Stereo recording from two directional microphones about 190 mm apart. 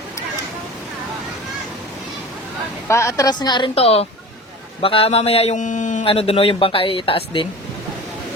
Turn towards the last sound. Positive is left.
turn(degrees=30)  # may be behind; listen again after turning